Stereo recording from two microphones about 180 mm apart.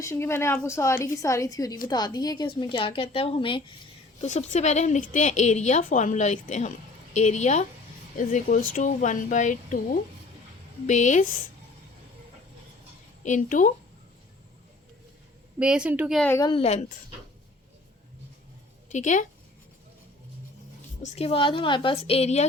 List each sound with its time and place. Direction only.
0.0 s a woman's voice: 15° left (ahead or behind); by 11.3 s 45° left (ahead or behind)
13.2 s speech: 45° left (ahead or behind)
15.5 s a woman's voice: 5° right (ahead or behind)
16.2 s a woman's voice: 15° left (ahead or behind)
16.5 s a woman's voice: 35° left (ahead or behind)
18.9 s a woman's voice: 45° left (ahead or behind)
21.0 s a woman's voice: 35° left (ahead or behind)